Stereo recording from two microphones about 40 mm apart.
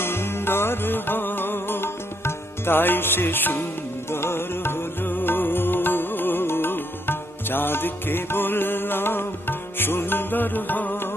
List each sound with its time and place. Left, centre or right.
0.0 s music: left
4.1 s music: left